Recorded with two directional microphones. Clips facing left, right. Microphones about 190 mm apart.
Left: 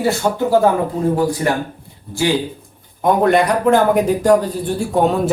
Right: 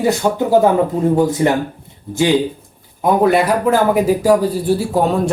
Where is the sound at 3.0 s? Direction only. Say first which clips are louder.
Right 1 dB; 5° right (ahead or behind).